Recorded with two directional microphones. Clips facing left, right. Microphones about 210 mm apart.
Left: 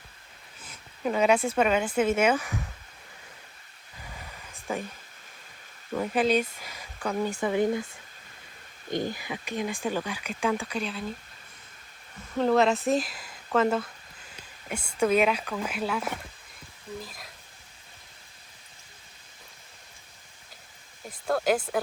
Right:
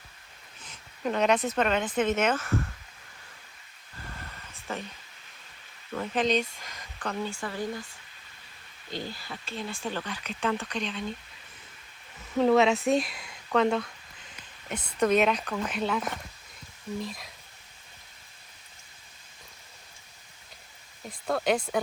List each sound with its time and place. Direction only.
0.6 s speech: 5° left (ahead or behind)
4.3 s a sound: 10° left (ahead or behind)
5.9 s speech: 10° left (ahead or behind)
8.9 s speech: 15° left (ahead or behind)
12.4 s speech: centre (ahead or behind)
21.2 s speech: centre (ahead or behind)